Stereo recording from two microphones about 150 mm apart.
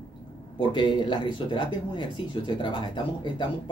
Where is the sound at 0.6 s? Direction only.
30° left (ahead or behind).